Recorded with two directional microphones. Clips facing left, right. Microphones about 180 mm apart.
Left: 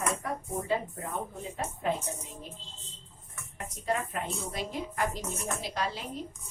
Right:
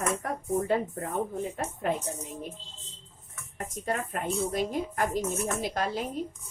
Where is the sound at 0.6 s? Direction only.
50° right (ahead or behind).